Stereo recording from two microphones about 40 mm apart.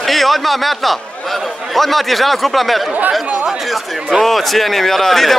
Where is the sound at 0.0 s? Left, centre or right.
Centre.